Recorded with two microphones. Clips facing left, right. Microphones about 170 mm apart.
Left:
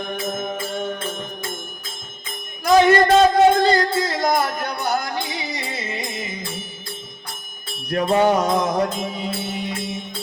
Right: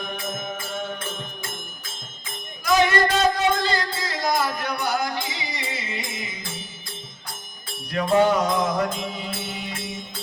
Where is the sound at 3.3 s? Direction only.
50° left (ahead or behind).